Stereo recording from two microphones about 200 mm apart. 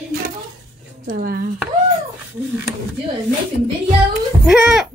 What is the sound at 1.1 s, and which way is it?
Speech, 45° right (ahead or behind).